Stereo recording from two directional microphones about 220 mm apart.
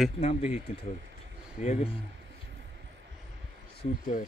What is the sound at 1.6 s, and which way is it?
Speech, 30° left (ahead or behind).